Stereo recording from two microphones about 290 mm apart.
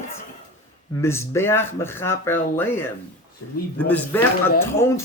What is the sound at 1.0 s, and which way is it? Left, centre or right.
Speech, centre.